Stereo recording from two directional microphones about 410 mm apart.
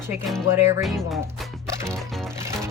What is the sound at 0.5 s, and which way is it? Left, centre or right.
Music, centre.